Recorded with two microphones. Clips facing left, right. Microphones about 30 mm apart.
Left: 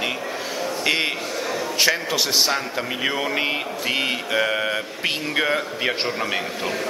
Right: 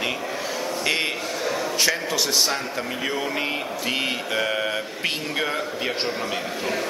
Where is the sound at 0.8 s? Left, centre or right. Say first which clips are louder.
Left 3 dB; centre.